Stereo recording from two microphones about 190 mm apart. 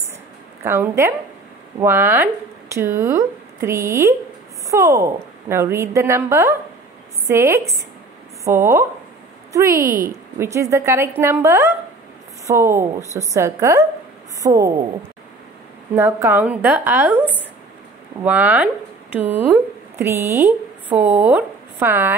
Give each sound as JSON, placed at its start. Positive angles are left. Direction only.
{"t": 0.7, "sound": "a woman's voice", "side_deg": -15}
{"t": 9.7, "sound": "a woman's voice", "side_deg": -45}
{"t": 10.4, "sound": "a woman's voice", "side_deg": -15}
{"t": 15.9, "sound": "a woman's voice", "side_deg": -15}
{"t": 18.2, "sound": "a woman's voice", "side_deg": -10}